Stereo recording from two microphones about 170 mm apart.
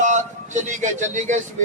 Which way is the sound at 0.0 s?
45° right (ahead or behind).